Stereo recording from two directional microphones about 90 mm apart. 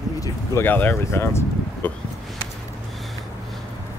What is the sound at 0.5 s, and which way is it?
Speech, 20° left (ahead or behind).